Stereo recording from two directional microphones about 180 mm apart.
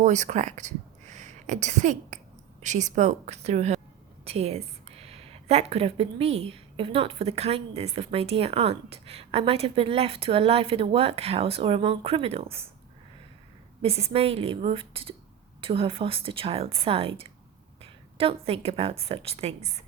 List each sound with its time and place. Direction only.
0.0 s a woman's voice: 40° right (ahead or behind)
13.8 s a woman's voice: 35° right (ahead or behind)